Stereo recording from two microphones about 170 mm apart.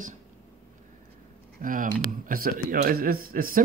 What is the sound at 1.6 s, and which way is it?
Speech, 50° right (ahead or behind).